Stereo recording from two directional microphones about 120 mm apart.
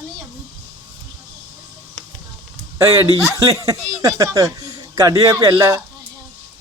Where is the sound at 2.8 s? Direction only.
25° right (ahead or behind).